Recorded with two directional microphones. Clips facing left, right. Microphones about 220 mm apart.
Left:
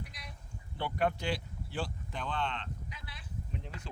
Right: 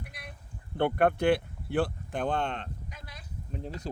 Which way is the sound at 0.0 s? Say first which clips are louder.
Right 2 dB; 55° right (ahead or behind).